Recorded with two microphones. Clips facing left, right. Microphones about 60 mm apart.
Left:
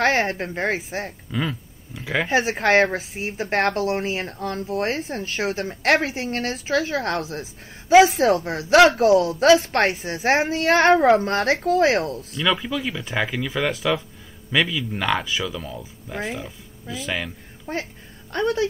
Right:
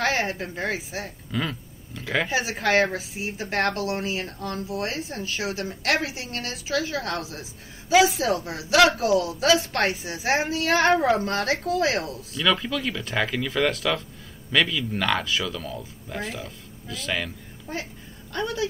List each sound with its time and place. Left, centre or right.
0.0 s speech: left
1.3 s a sound: centre
2.2 s speech: left
12.4 s speech: centre
17.7 s speech: left